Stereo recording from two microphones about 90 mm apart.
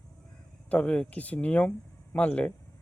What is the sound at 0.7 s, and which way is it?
Speech, 15° left (ahead or behind).